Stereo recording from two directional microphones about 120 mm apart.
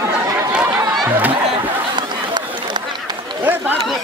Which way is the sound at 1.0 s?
15° right (ahead or behind).